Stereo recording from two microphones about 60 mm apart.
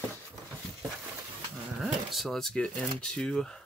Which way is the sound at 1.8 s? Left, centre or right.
Centre.